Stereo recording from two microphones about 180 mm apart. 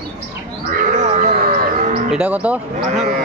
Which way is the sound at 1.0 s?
40° right (ahead or behind).